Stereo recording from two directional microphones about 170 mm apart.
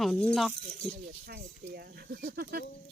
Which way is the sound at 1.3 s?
65° right (ahead or behind).